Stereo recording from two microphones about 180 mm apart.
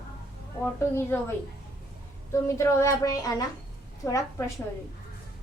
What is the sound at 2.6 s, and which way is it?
A woman's voice, 15° left (ahead or behind).